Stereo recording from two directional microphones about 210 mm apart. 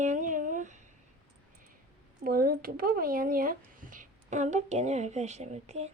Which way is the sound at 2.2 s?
45° right (ahead or behind).